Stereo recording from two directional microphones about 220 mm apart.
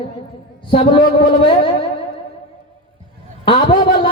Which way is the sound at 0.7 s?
20° left (ahead or behind).